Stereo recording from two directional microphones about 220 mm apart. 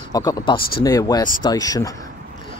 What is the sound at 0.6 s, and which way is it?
Speech, 45° left (ahead or behind).